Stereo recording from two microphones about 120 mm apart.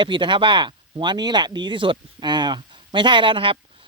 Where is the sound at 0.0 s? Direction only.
40° right (ahead or behind).